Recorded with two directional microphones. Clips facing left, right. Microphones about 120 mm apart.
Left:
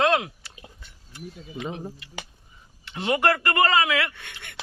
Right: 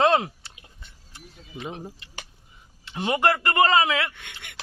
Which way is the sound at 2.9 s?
20° right (ahead or behind).